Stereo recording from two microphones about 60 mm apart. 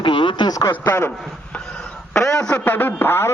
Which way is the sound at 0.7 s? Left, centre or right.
Left.